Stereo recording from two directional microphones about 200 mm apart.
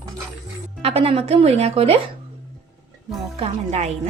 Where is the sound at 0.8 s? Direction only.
30° right (ahead or behind).